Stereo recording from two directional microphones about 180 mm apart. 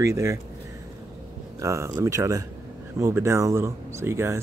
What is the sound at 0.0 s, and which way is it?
Speech, 15° right (ahead or behind).